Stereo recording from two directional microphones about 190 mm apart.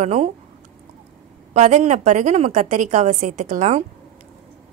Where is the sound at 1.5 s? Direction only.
40° right (ahead or behind).